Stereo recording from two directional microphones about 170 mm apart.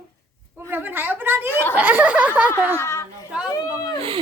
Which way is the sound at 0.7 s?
10° right (ahead or behind).